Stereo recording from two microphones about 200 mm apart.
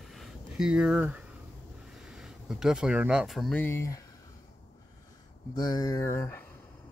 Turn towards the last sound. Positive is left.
turn(degrees=10)  # may be behind; listen again after turning